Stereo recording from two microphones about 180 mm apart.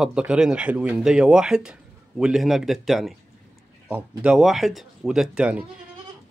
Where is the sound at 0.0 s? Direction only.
5° right (ahead or behind).